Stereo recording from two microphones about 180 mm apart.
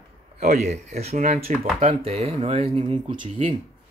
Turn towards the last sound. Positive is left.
turn(degrees=-30)  # may be behind; listen again after turning